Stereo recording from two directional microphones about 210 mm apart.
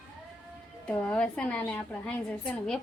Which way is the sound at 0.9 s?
5° left (ahead or behind).